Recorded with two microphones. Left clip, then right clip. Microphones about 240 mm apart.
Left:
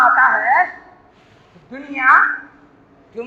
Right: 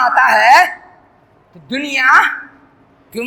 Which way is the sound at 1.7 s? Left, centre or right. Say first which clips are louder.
Right 3 dB; right.